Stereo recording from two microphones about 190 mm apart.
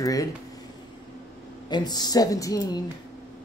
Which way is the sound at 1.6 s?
20° left (ahead or behind).